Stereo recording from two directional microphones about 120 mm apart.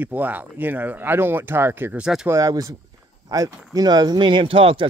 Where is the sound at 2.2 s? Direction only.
25° right (ahead or behind).